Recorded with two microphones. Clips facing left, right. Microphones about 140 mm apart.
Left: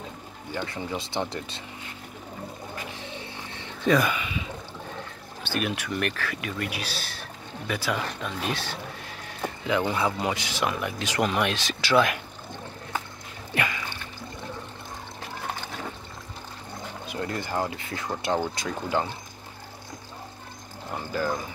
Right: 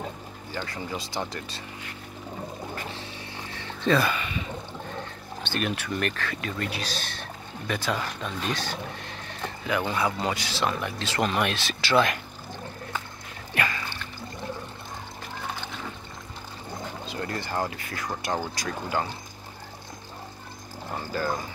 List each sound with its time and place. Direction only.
0.7 s speech: 25° left (ahead or behind)
2.7 s a sound: 15° left (ahead or behind)
5.4 s speech: 10° left (ahead or behind)
9.7 s speech: 20° left (ahead or behind)
11.9 s speech: 5° left (ahead or behind)
13.6 s music: 15° left (ahead or behind)
17.1 s speech: 15° left (ahead or behind)